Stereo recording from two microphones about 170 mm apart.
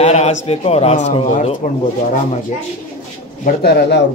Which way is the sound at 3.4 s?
75° left (ahead or behind).